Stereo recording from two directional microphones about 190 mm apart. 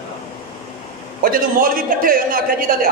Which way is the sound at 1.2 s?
50° right (ahead or behind).